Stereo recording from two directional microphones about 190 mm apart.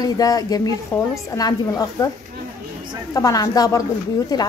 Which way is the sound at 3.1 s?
20° left (ahead or behind).